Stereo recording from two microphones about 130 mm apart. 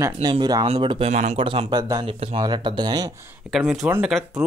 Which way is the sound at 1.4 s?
40° right (ahead or behind).